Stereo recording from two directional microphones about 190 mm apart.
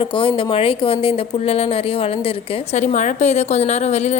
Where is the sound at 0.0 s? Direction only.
25° left (ahead or behind).